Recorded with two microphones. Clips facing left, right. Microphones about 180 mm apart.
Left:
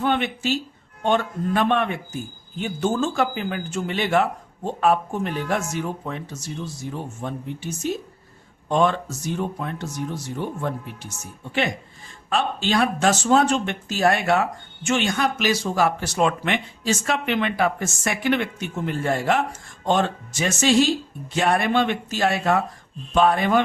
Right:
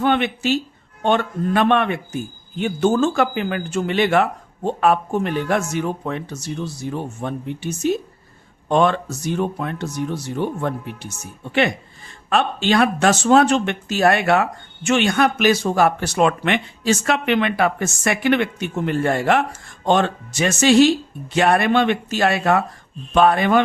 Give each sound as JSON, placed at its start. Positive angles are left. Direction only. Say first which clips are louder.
{"t": 0.0, "sound": "a man's voice", "louder": "right 4 dB", "side_deg": -70}
{"t": 12.3, "sound": "a man's voice", "louder": "right 4 dB", "side_deg": -65}